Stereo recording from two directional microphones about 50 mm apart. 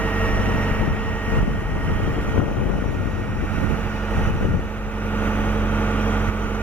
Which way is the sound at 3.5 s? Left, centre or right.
Left.